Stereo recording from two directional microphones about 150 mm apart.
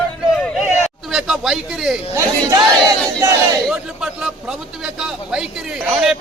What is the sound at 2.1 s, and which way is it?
Speech, 25° right (ahead or behind).